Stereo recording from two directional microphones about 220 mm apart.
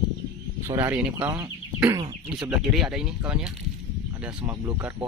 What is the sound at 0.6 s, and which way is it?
Speech, 10° right (ahead or behind).